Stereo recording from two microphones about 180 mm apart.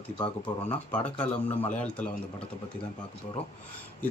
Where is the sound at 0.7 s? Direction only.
10° left (ahead or behind).